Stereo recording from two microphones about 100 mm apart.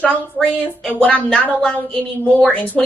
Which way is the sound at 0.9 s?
10° left (ahead or behind).